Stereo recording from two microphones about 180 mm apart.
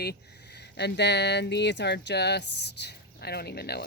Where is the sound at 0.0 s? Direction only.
65° left (ahead or behind).